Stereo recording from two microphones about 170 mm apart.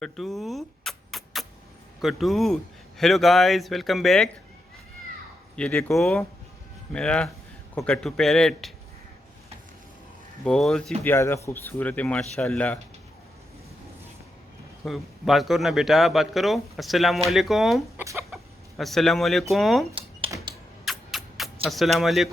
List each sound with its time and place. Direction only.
0.0 s rodents: centre (ahead or behind)
2.0 s speech: centre (ahead or behind)
5.5 s speech: 5° left (ahead or behind)
10.4 s speech: 5° left (ahead or behind)
11.0 s speech: 15° left (ahead or behind)
14.8 s speech: centre (ahead or behind)
17.9 s chicken: 15° right (ahead or behind)
18.8 s speech: centre (ahead or behind)
20.8 s a sound: centre (ahead or behind)